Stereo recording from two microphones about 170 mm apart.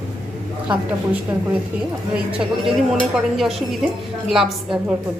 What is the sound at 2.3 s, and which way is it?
Speech, 5° right (ahead or behind).